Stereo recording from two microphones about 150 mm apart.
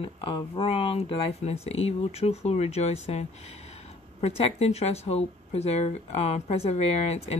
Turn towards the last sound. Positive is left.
turn(degrees=45)  # may be behind; listen again after turning